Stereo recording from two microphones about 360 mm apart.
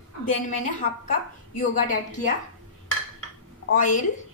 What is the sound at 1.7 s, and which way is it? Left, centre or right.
Speech, left.